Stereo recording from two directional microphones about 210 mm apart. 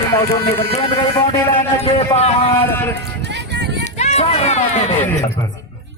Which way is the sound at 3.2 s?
55° right (ahead or behind).